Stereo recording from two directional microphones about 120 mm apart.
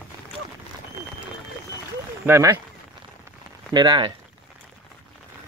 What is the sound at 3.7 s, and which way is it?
Speech, 35° right (ahead or behind).